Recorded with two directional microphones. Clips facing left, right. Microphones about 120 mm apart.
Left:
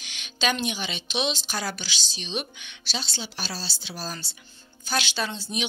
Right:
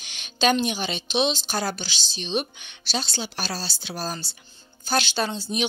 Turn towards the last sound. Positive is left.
turn(degrees=-40)  # may be behind; listen again after turning